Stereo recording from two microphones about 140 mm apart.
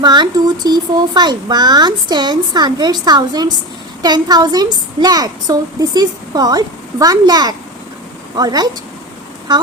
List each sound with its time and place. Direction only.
0.0 s a woman's voice: 30° right (ahead or behind)